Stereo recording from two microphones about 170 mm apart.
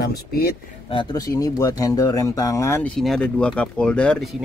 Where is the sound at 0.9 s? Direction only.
25° left (ahead or behind).